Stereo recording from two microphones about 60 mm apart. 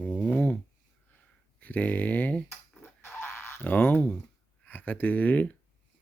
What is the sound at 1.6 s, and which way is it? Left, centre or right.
Speech, left.